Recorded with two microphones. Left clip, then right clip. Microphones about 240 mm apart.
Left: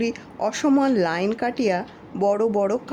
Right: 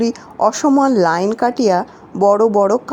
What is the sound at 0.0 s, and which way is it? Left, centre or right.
Speech, centre.